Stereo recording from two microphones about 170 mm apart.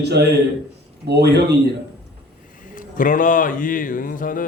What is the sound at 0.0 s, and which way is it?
Speech, 75° right (ahead or behind).